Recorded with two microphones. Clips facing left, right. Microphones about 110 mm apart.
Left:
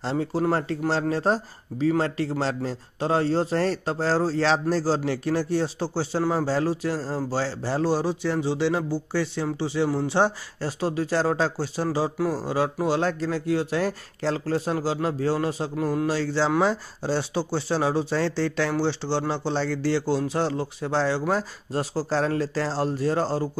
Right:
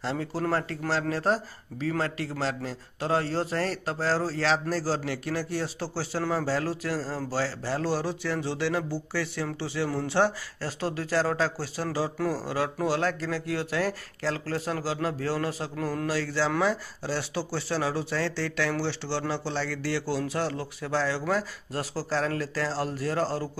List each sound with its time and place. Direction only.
0.0 s speech: 25° left (ahead or behind)